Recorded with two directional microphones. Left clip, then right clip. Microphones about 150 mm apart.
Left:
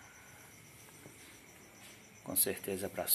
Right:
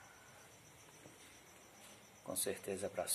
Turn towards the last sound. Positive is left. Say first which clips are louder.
# left 3 dB
turn(degrees=0)  # may be behind; listen again after turning